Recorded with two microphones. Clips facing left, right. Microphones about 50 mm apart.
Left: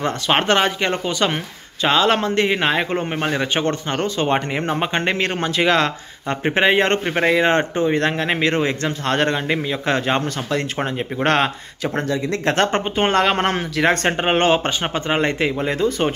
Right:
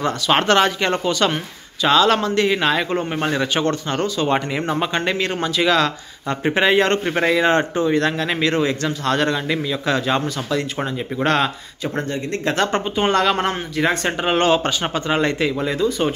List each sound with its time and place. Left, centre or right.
0.3 s a man's voice: left
1.8 s a man's voice: left
11.8 s speech: left
12.5 s speech: left
13.5 s speech: left
14.1 s speech: left